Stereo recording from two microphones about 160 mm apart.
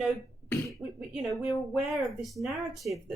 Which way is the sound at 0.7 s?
Centre (ahead or behind).